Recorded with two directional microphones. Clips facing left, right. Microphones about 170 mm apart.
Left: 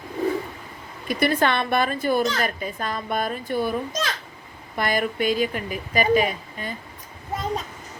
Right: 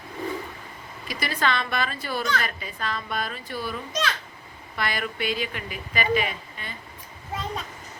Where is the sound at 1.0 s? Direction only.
55° left (ahead or behind).